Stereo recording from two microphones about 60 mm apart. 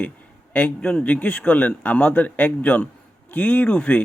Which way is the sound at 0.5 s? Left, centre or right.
Centre.